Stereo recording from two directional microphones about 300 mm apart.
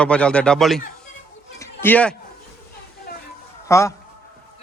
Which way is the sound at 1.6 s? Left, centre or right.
Centre.